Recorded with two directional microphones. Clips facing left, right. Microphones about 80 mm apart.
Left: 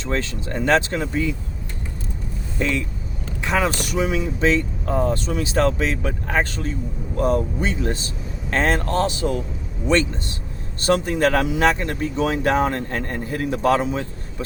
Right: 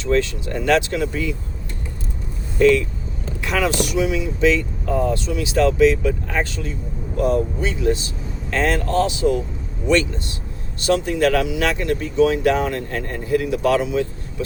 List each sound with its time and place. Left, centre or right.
0.0 s speech: left
2.6 s speech: centre
3.8 s speech: left
9.9 s speech: left